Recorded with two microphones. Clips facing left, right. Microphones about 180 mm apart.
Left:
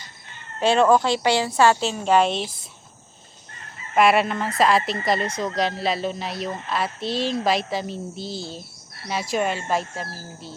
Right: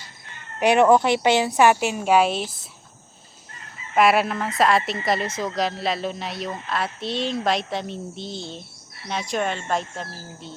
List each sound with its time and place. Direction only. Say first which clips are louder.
0.6 s a woman's voice: right 1 dB; 20° right (ahead or behind)
3.9 s speech: even; centre (ahead or behind)